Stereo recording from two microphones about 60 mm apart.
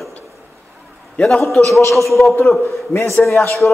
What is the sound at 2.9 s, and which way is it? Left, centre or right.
Speech, left.